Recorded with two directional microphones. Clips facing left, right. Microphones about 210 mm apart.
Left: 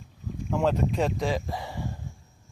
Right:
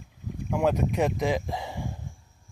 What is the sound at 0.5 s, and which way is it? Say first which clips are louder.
Speech: even; 10° right (ahead or behind).